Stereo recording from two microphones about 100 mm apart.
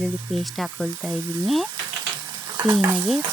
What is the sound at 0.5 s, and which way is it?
Speech, centre (ahead or behind).